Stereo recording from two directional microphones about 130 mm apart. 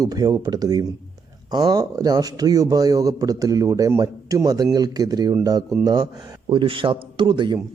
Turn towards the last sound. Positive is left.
turn(degrees=-40)  # may be behind; listen again after turning